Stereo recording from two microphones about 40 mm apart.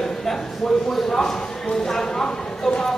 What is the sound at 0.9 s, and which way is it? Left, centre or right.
A man's voice, centre.